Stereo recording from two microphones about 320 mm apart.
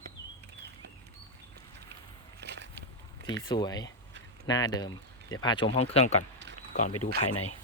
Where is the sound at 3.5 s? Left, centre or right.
Centre.